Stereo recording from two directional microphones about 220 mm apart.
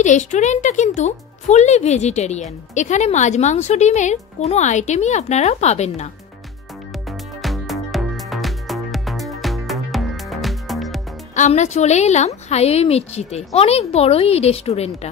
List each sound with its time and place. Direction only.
0.0 s speech: 35° left (ahead or behind)
7.1 s music: centre (ahead or behind)
11.3 s a woman's voice: 30° left (ahead or behind)